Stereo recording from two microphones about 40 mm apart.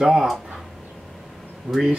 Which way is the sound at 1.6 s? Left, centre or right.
Centre.